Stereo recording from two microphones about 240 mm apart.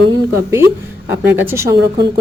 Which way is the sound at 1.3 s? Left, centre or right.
Centre.